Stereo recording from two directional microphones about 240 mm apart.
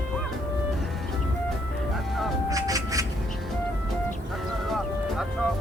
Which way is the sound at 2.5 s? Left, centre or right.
Centre.